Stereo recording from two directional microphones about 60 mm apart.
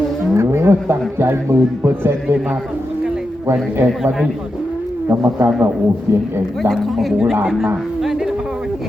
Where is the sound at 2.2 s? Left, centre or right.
Centre.